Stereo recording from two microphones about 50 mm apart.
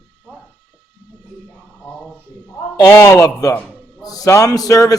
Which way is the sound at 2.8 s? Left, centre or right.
Left.